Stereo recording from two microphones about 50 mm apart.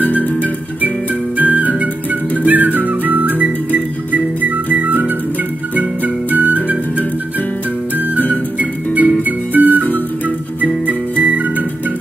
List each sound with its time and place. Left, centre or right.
0.2 s music: left
1.4 s music: right
8.5 s music: right
11.2 s music: right